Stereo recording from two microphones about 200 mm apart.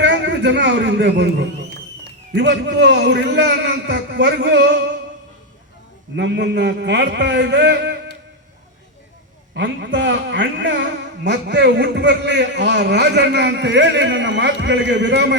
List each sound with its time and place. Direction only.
0.0 s a man's voice: 60° right (ahead or behind)
6.1 s a man's voice: 60° right (ahead or behind)
9.6 s a man's voice: 60° right (ahead or behind)